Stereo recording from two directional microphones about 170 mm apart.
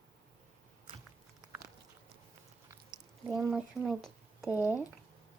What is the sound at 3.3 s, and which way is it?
Speech, 5° right (ahead or behind).